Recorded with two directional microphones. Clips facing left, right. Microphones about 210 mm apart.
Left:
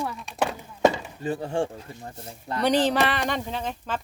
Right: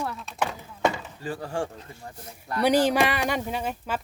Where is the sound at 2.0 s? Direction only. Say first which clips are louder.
Left 3 dB; 25° left (ahead or behind).